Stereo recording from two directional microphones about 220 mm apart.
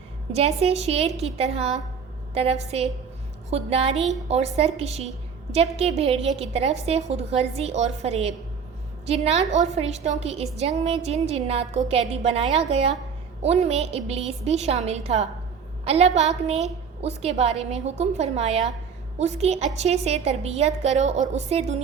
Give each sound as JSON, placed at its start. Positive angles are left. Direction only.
{"t": 0.3, "sound": "a woman's voice", "side_deg": -30}
{"t": 3.9, "sound": "a woman's voice", "side_deg": 0}
{"t": 4.3, "sound": "a woman's voice", "side_deg": -30}